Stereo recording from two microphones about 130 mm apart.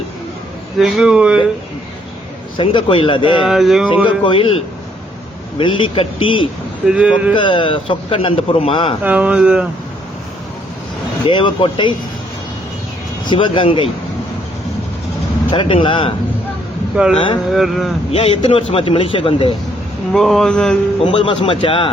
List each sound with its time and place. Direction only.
0.8 s speech: centre (ahead or behind)
2.6 s speech: 40° left (ahead or behind)
3.4 s speech: centre (ahead or behind)
3.8 s speech: 40° left (ahead or behind)
6.8 s speech: 10° right (ahead or behind)
7.3 s a man's voice: 40° left (ahead or behind)
9.0 s speech: 10° right (ahead or behind)
11.3 s speech: 40° left (ahead or behind)
13.2 s speech: 40° left (ahead or behind)
15.4 s a man's voice: 40° left (ahead or behind)
16.9 s speech: 5° right (ahead or behind)
18.1 s a man's voice: 50° left (ahead or behind)
20.1 s speech: centre (ahead or behind)
21.0 s speech: 40° left (ahead or behind)